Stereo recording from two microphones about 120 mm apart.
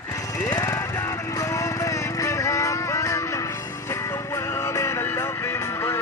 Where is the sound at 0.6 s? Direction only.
25° left (ahead or behind).